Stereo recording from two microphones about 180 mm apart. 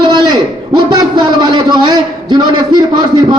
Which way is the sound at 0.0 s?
25° right (ahead or behind).